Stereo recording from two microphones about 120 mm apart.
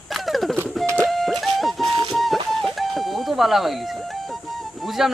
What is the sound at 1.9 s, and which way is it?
Music, 50° right (ahead or behind).